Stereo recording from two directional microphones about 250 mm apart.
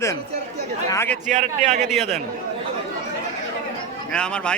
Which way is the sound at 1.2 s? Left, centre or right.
Right.